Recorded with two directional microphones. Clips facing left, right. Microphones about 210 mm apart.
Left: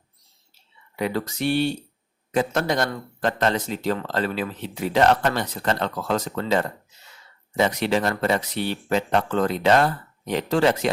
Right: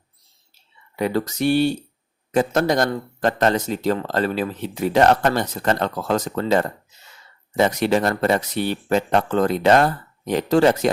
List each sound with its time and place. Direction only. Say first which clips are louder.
0.9 s a man's voice: right 4 dB; 40° right (ahead or behind)